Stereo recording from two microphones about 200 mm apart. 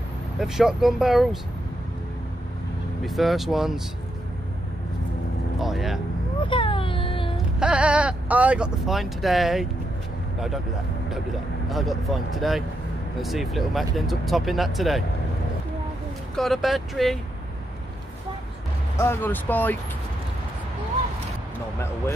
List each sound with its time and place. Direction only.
0.4 s speech: centre (ahead or behind)
3.0 s speech: centre (ahead or behind)
5.6 s vehicle: centre (ahead or behind)
6.4 s a sound: 25° left (ahead or behind)
7.6 s speech: 5° right (ahead or behind)
11.7 s speech: centre (ahead or behind)
16.3 s speech: centre (ahead or behind)
18.9 s speech: 10° left (ahead or behind)